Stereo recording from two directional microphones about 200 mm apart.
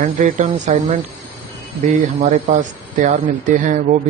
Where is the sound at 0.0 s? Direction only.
40° right (ahead or behind).